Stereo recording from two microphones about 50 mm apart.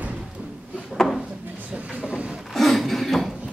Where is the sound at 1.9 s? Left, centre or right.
Centre.